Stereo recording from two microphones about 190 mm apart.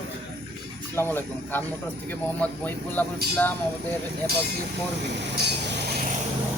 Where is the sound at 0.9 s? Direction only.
10° left (ahead or behind).